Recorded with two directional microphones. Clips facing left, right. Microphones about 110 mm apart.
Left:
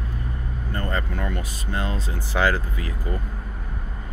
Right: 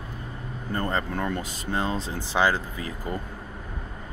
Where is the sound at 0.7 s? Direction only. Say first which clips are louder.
Right 1 dB; 25° right (ahead or behind).